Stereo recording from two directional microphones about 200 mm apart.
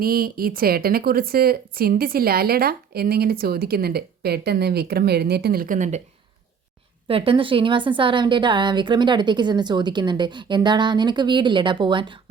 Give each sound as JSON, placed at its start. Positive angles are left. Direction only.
{"t": 0.0, "sound": "speech", "side_deg": -45}
{"t": 7.1, "sound": "a woman's voice", "side_deg": -25}